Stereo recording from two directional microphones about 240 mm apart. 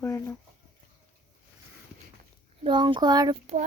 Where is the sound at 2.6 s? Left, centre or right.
Centre.